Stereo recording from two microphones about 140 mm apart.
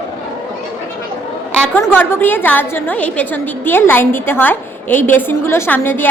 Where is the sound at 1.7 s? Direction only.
15° left (ahead or behind).